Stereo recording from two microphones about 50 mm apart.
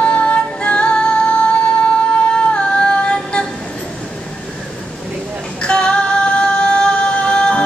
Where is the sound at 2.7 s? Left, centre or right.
Centre.